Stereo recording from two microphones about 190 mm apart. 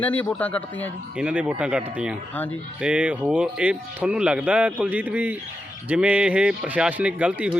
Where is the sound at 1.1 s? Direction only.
5° right (ahead or behind).